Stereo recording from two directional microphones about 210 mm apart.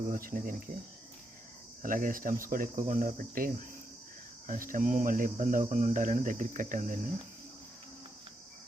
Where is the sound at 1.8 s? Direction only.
40° right (ahead or behind).